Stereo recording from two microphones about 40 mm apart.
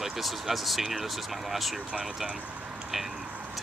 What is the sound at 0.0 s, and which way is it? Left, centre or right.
Speech, centre.